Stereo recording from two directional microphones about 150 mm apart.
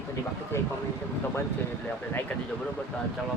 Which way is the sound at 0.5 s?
15° left (ahead or behind).